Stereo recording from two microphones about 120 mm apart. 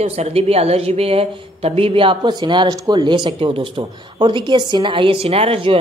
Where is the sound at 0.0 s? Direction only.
60° right (ahead or behind).